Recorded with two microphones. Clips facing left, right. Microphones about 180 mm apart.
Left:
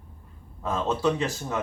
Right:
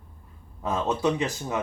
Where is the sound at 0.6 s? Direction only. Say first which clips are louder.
Even; 15° right (ahead or behind).